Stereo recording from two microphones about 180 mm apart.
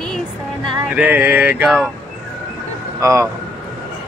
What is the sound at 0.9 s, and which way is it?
Male singing, 10° right (ahead or behind).